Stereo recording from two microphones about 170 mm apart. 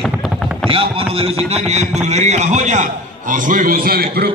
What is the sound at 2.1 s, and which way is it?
A man's voice, 40° right (ahead or behind).